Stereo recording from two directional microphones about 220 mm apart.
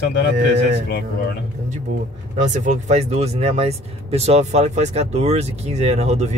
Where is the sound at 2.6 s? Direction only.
30° right (ahead or behind).